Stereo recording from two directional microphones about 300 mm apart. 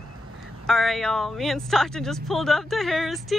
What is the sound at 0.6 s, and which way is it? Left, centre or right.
Speech, centre.